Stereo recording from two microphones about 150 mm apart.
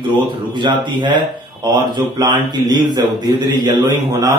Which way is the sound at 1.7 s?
30° right (ahead or behind).